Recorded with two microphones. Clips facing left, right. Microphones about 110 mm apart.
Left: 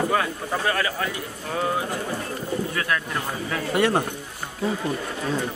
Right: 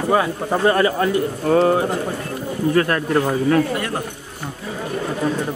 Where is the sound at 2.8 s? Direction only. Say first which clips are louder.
Right 9 dB; 45° right (ahead or behind).